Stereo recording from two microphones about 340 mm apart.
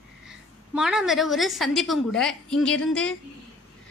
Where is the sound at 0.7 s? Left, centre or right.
Centre.